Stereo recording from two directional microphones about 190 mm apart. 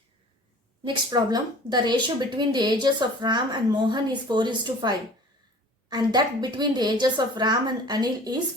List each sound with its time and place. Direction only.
1.1 s a woman's voice: 20° right (ahead or behind)